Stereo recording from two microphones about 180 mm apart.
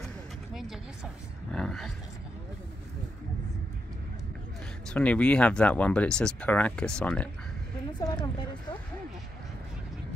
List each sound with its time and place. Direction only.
1.5 s a sound: 5° left (ahead or behind)
4.8 s speech: 5° left (ahead or behind)
8.0 s speech: 20° left (ahead or behind)